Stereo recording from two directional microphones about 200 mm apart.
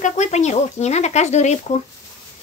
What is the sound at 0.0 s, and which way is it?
Speech, 35° left (ahead or behind).